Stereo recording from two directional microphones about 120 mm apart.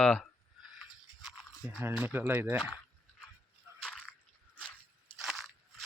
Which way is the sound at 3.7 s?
5° left (ahead or behind).